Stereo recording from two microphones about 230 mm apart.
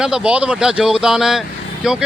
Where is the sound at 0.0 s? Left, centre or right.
Centre.